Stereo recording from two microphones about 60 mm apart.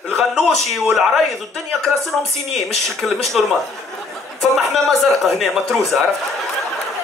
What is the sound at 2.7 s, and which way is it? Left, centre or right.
Speech, centre.